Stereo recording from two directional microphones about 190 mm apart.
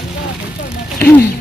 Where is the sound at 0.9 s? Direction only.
10° left (ahead or behind).